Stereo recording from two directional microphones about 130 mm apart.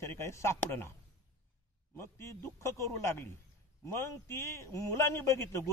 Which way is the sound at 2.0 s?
20° left (ahead or behind).